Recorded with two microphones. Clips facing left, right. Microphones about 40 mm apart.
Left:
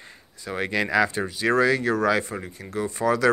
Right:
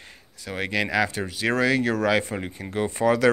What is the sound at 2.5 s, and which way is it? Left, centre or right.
Speech, right.